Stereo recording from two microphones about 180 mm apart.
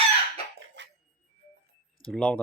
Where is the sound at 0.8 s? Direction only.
80° right.